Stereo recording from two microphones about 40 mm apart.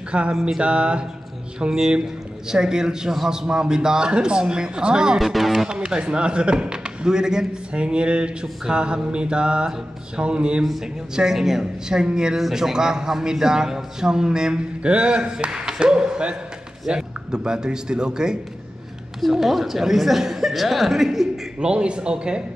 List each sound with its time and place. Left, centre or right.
0.3 s a man's voice: centre
0.6 s mantra: right
2.4 s a man's voice: centre
3.3 s mantra: centre
5.2 s speech: centre
5.7 s mantra: right
11.1 s a man's voice: centre
12.4 s a man's voice: centre
14.8 s mantra: right
19.2 s a man's voice: centre
21.5 s mantra: right